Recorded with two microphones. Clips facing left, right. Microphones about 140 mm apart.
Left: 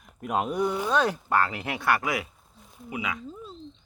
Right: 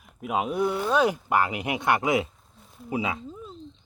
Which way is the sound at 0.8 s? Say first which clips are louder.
Right 2 dB; 10° right (ahead or behind).